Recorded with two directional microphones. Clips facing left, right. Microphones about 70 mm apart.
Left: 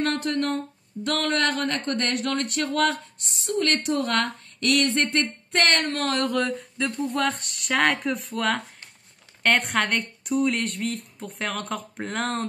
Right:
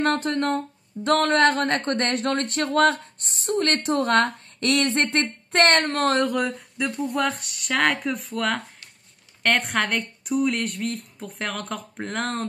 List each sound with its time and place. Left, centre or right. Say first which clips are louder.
0.0 s speech: right 2 dB; right
6.2 s a woman's voice: even; centre